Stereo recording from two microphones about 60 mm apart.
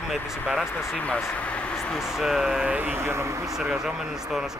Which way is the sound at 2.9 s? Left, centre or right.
Right.